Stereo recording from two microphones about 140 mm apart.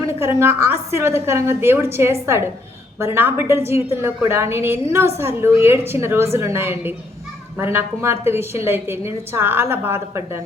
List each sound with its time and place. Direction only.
0.0 s a woman's voice: 20° right (ahead or behind)